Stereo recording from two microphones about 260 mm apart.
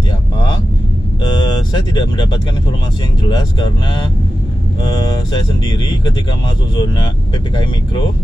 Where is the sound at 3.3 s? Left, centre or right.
Centre.